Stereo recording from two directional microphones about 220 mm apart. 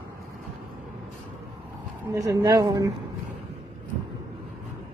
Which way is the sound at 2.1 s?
15° right (ahead or behind).